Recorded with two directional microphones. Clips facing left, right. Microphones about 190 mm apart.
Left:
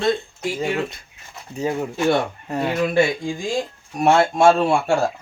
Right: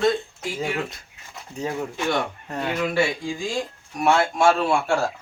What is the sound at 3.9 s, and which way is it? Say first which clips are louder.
Speech: left 4 dB; 25° left (ahead or behind).